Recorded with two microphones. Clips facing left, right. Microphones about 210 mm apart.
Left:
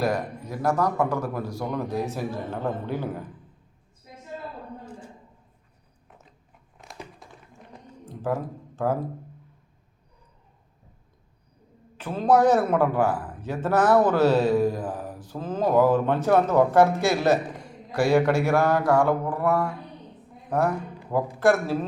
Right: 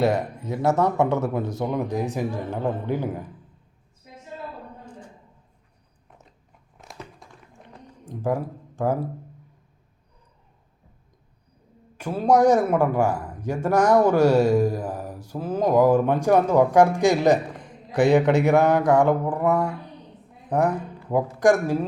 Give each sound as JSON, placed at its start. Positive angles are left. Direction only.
{"t": 0.0, "sound": "speech", "side_deg": -25}
{"t": 7.2, "sound": "tap", "side_deg": 0}
{"t": 8.0, "sound": "speech", "side_deg": -15}
{"t": 11.9, "sound": "a man's voice", "side_deg": -10}